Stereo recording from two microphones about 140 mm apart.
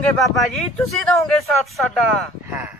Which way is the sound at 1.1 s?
15° left (ahead or behind).